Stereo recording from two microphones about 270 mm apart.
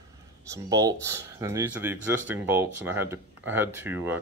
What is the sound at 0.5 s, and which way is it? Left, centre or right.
Speech, centre.